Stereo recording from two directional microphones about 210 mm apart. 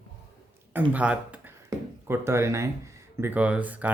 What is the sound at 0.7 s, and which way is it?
Speech, 5° right (ahead or behind).